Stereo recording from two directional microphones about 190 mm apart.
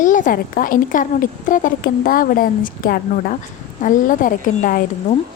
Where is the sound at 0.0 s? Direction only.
45° left (ahead or behind).